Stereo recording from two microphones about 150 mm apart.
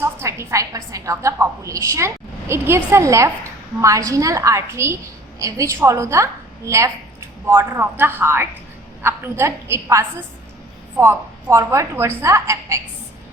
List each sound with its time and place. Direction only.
0.0 s a woman's voice: 15° right (ahead or behind)